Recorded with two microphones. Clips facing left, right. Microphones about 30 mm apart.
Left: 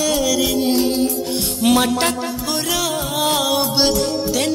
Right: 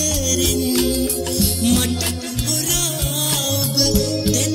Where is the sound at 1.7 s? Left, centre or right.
Left.